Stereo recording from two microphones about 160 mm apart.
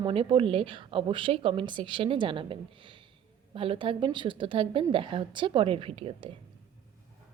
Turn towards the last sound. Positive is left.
turn(degrees=-35)  # may be behind; listen again after turning